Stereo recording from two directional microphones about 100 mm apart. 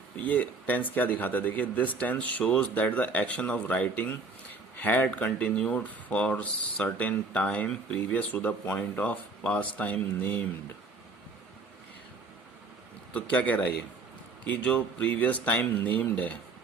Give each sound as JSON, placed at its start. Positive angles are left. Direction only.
{"t": 0.2, "sound": "speech", "side_deg": 15}
{"t": 13.1, "sound": "speech", "side_deg": 15}